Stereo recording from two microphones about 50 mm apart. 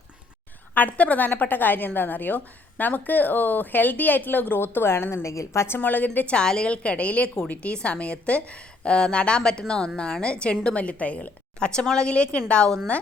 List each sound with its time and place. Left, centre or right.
0.7 s a woman's voice: left
5.1 s a woman's voice: left
5.8 s a woman's voice: left
6.2 s a woman's voice: centre
11.6 s speech: centre